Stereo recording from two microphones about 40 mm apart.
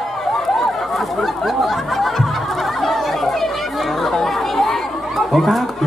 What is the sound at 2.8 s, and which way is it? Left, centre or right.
Chatter, centre.